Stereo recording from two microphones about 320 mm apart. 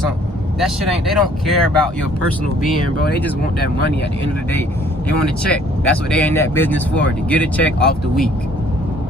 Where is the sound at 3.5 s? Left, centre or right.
Left.